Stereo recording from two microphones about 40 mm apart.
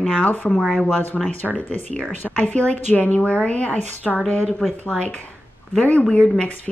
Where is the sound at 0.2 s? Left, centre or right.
Left.